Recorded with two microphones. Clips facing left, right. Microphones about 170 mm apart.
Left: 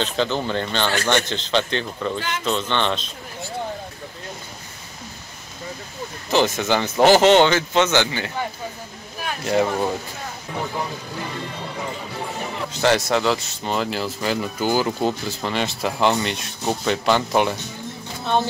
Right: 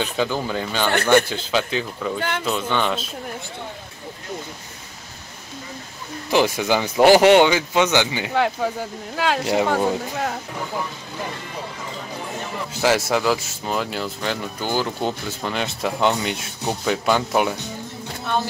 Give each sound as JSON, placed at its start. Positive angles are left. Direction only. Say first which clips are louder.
{"t": 0.0, "sound": "speech", "louder": "even", "side_deg": -10}
{"t": 2.1, "sound": "speech", "louder": "right 2 dB", "side_deg": -55}
{"t": 2.4, "sound": "speech", "louder": "left 2 dB", "side_deg": -10}
{"t": 6.3, "sound": "speech", "louder": "right 1 dB", "side_deg": -10}
{"t": 9.1, "sound": "speech", "louder": "right 9 dB", "side_deg": -90}
{"t": 9.7, "sound": "speech", "louder": "right 3 dB", "side_deg": -75}
{"t": 12.8, "sound": "speech", "louder": "even", "side_deg": -5}